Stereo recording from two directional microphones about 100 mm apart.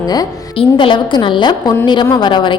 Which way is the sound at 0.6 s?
55° left (ahead or behind).